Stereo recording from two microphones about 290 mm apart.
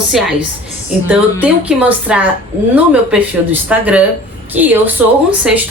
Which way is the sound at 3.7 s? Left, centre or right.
Centre.